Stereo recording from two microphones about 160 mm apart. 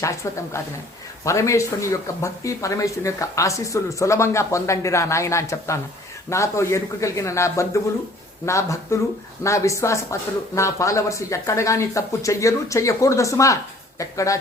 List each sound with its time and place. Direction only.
0.0 s speech: 20° left (ahead or behind)